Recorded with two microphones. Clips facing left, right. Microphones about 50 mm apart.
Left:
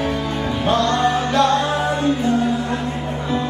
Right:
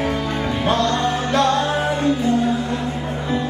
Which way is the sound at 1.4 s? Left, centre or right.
Left.